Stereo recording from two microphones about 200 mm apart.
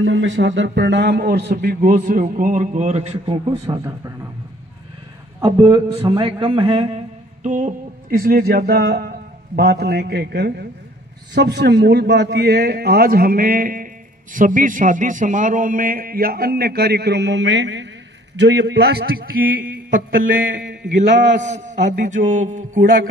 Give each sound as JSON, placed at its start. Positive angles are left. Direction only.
{"t": 0.0, "sound": "a man's voice", "side_deg": -70}
{"t": 3.6, "sound": "a man's voice", "side_deg": -15}
{"t": 5.4, "sound": "a man's voice", "side_deg": -25}
{"t": 7.4, "sound": "a man's voice", "side_deg": -40}
{"t": 20.3, "sound": "a sound", "side_deg": -45}
{"t": 21.4, "sound": "a man's voice", "side_deg": -35}
{"t": 21.9, "sound": "a sound", "side_deg": -40}